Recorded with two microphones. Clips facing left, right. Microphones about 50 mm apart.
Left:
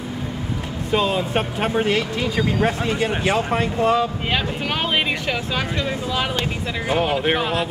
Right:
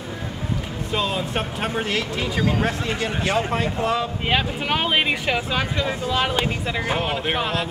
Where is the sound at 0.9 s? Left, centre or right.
Centre.